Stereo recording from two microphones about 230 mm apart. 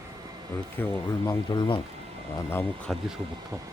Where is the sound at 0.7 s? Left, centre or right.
Centre.